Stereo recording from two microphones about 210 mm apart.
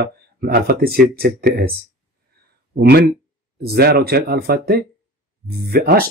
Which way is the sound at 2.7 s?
50° right (ahead or behind).